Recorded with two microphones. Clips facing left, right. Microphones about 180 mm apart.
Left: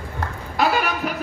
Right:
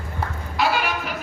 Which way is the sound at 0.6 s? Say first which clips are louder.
Left 2 dB; 45° left (ahead or behind).